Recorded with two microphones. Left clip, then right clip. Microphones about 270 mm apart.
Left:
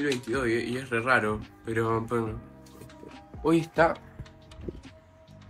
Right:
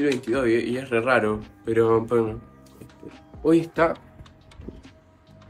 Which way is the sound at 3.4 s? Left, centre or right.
Left.